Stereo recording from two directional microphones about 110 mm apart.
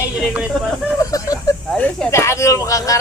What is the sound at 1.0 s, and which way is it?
Speech, 35° left (ahead or behind).